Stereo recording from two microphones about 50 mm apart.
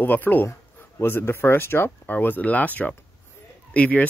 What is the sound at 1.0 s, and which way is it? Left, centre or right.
Speech, left.